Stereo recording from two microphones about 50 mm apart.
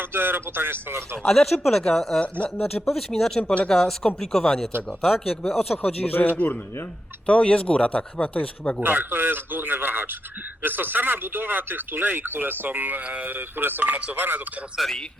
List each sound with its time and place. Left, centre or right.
0.0 s speech: right
1.2 s speech: centre
2.2 s speech: left
2.6 s speech: centre
5.8 s a man's voice: left
7.3 s speech: left
8.8 s speech: right
14.8 s a man's voice: centre